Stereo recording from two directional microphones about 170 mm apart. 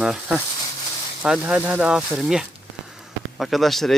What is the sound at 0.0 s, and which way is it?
Speech, 5° right (ahead or behind).